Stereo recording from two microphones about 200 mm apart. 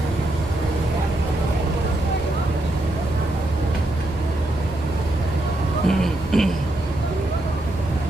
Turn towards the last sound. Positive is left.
turn(degrees=0)  # may be behind; listen again after turning